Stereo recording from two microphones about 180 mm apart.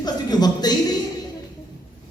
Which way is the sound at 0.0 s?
20° left (ahead or behind).